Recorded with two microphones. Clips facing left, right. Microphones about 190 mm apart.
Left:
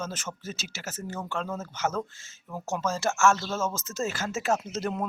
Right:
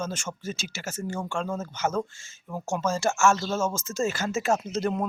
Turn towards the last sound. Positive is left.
turn(degrees=5)  # may be behind; listen again after turning